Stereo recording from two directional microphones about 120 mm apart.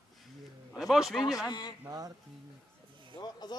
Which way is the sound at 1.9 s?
30° right (ahead or behind).